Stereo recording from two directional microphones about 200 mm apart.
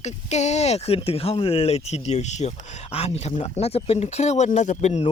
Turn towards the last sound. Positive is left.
turn(degrees=35)  # may be behind; listen again after turning